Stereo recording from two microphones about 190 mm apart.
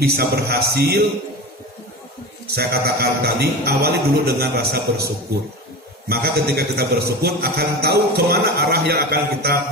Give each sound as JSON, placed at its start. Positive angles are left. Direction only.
{"t": 0.0, "sound": "a man's voice", "side_deg": -55}
{"t": 2.5, "sound": "a man's voice", "side_deg": -55}
{"t": 6.0, "sound": "a man's voice", "side_deg": -55}